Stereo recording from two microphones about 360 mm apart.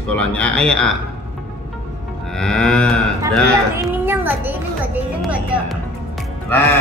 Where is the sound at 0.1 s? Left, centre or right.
Centre.